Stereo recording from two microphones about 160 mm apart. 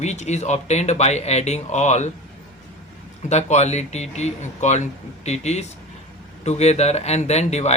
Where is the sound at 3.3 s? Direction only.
45° left (ahead or behind).